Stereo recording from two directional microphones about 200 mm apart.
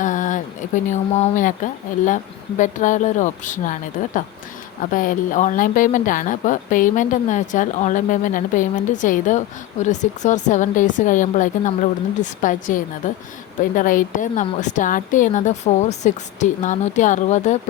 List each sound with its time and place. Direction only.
0.0 s a woman's voice: 40° left (ahead or behind)